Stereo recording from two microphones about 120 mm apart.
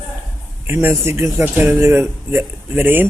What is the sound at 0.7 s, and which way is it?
Speech, 20° right (ahead or behind).